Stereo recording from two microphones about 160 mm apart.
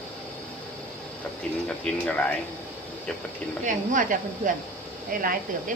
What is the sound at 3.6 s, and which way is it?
Speech, 55° right (ahead or behind).